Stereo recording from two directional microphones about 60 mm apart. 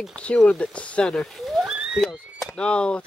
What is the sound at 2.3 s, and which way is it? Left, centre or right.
Speech, centre.